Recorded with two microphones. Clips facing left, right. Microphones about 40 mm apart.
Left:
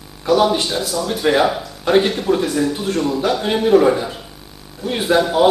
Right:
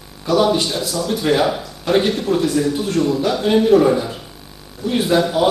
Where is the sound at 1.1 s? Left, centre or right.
Centre.